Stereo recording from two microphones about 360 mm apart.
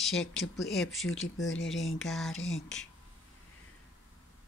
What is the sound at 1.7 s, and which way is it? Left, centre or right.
Speech, centre.